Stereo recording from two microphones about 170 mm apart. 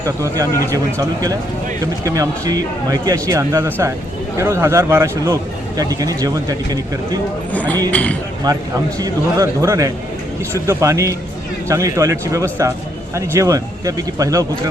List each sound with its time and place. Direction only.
0.9 s a man's voice: 20° right (ahead or behind)
7.5 s speech: 10° left (ahead or behind)
8.5 s a man's voice: 25° right (ahead or behind)